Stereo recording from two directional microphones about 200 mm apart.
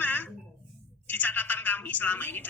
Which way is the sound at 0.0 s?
10° left (ahead or behind).